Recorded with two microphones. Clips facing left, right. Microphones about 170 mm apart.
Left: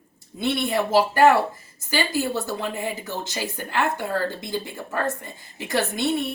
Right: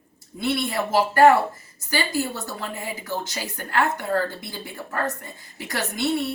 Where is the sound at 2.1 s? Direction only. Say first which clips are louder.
Left 2 dB; 20° left (ahead or behind).